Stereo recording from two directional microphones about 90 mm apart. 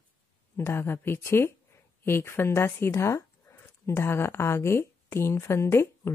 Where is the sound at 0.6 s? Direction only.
30° left (ahead or behind).